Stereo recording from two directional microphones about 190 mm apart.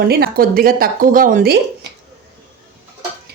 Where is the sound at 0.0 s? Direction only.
55° right (ahead or behind).